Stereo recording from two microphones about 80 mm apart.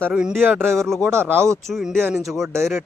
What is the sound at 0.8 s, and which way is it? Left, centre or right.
Speech, centre.